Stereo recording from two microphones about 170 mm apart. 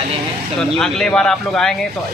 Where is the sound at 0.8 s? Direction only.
5° left (ahead or behind).